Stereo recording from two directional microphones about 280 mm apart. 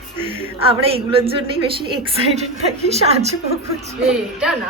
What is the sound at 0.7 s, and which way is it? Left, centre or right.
Speech, centre.